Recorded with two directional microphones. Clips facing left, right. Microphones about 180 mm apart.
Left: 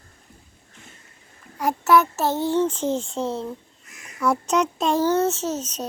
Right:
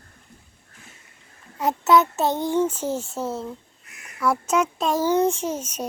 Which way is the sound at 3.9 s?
60° right (ahead or behind).